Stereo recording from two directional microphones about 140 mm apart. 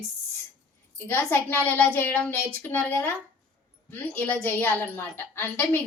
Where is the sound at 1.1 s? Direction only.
15° left (ahead or behind).